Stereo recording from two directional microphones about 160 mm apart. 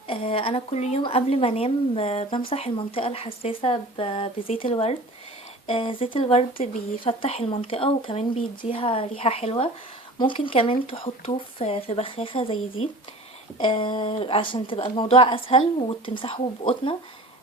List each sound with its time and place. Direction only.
0.1 s speech: 35° left (ahead or behind)
13.6 s speech: 35° left (ahead or behind)